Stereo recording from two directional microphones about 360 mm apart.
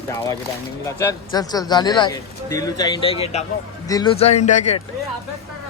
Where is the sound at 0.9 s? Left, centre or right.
Centre.